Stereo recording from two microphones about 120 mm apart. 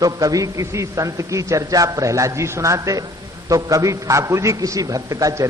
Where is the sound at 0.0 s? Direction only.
30° right (ahead or behind).